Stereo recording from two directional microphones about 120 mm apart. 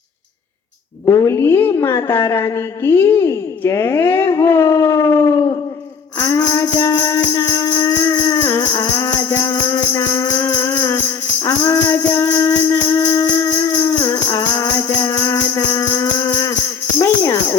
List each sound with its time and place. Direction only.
1.0 s a woman's voice: 25° left (ahead or behind)
6.1 s music: 25° left (ahead or behind)